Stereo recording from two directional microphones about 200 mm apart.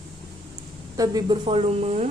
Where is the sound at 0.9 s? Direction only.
20° right (ahead or behind).